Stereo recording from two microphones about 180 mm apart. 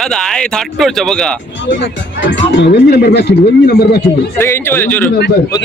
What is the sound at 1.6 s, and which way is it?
Speech, 90° left.